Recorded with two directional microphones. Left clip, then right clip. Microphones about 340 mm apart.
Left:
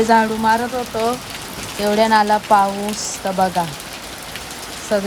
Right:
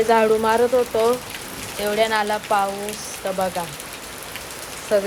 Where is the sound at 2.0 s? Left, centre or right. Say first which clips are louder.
Left 7 dB; centre.